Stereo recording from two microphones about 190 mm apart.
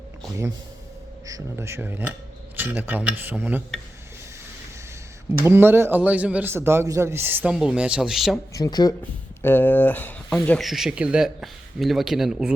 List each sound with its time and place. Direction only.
1.3 s a man's voice: 15° right (ahead or behind)
5.4 s a man's voice: 10° right (ahead or behind)
8.5 s speech: 20° left (ahead or behind); by 12.5 s 5° right (ahead or behind)